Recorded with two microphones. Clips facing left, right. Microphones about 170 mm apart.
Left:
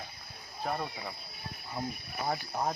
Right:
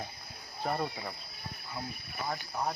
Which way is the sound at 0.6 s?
Centre (ahead or behind).